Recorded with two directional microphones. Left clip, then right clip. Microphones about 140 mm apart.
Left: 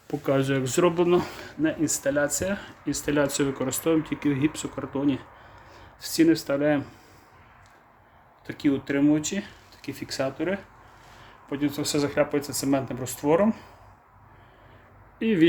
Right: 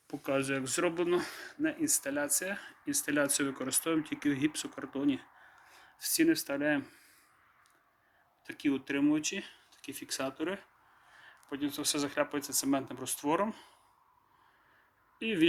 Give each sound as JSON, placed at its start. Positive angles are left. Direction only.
{"t": 0.3, "sound": "speech", "side_deg": 30}
{"t": 5.7, "sound": "speech", "side_deg": 15}
{"t": 8.4, "sound": "speech", "side_deg": 10}
{"t": 15.2, "sound": "speech", "side_deg": 15}